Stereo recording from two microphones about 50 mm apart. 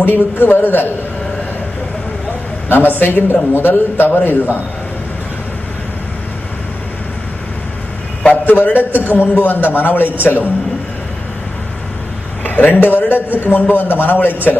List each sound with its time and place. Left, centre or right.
0.0 s a man's voice: left
2.7 s a man's voice: left
8.2 s a man's voice: left
8.7 s a man's voice: right
9.1 s a man's voice: left
12.4 s a sound: left
12.8 s a man's voice: left